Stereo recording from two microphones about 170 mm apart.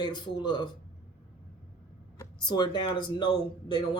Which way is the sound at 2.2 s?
25° left (ahead or behind).